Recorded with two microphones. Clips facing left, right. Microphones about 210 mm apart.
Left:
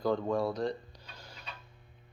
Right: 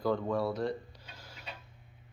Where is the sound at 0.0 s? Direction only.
5° right (ahead or behind).